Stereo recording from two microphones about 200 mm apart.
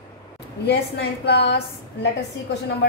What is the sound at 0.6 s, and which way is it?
Speech, 55° left (ahead or behind).